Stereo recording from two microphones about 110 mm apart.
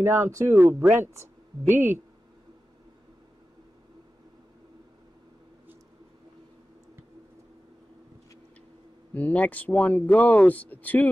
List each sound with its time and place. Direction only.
0.0 s speech: 25° right (ahead or behind)
9.1 s speech: 15° left (ahead or behind)